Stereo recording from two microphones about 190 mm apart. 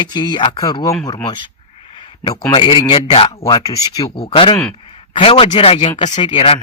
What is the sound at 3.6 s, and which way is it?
Speech, 20° left (ahead or behind).